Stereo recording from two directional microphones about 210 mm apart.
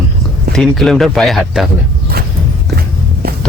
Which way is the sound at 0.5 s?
Centre (ahead or behind).